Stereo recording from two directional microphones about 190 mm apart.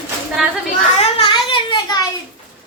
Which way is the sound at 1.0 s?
30° left (ahead or behind).